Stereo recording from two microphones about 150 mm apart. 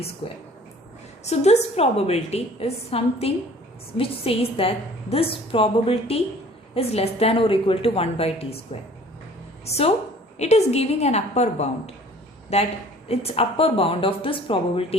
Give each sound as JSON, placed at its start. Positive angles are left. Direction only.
{"t": 0.2, "sound": "a woman's voice", "side_deg": 35}
{"t": 1.2, "sound": "a woman's voice", "side_deg": 45}
{"t": 9.6, "sound": "a woman's voice", "side_deg": 45}